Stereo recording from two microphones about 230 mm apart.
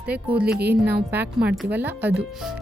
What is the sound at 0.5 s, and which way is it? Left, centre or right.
A woman's voice, centre.